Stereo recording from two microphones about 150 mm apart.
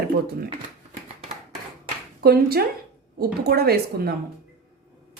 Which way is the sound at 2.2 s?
90° right.